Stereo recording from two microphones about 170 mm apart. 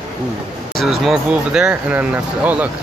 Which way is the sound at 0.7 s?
Centre (ahead or behind).